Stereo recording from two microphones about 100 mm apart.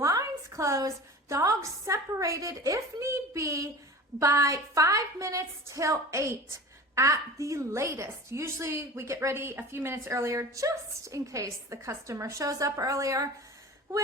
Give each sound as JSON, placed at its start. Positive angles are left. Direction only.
{"t": 0.0, "sound": "a woman's voice", "side_deg": -35}